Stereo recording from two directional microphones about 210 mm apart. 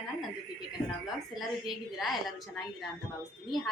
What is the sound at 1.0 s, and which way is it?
A woman's voice, centre (ahead or behind).